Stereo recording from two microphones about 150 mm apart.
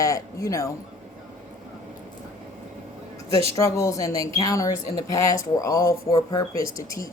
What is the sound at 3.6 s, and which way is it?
Speech, 20° left (ahead or behind).